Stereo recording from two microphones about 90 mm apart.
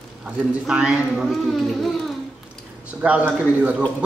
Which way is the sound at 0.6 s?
10° right (ahead or behind).